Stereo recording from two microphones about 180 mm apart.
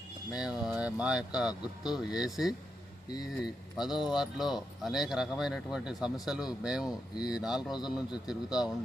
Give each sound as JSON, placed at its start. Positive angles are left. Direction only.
{"t": 0.3, "sound": "speech", "side_deg": -5}